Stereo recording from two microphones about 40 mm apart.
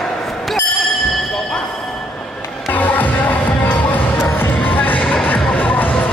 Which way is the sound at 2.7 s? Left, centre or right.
Left.